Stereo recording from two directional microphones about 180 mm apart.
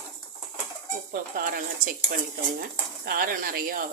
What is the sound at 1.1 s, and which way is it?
Speech, 50° right (ahead or behind).